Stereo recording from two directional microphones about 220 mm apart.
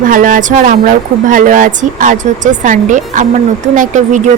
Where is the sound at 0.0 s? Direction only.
35° right (ahead or behind).